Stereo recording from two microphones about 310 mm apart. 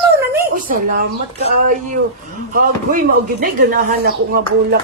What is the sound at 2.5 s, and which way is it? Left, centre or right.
Speech, right.